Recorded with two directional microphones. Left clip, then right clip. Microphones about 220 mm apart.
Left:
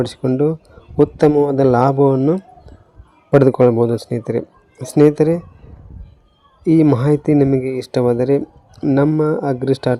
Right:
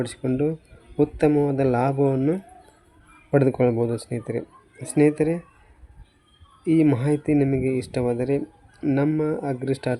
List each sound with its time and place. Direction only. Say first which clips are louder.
0.0 s speech: left 8 dB; 25° left (ahead or behind)
6.7 s speech: left 7 dB; 25° left (ahead or behind)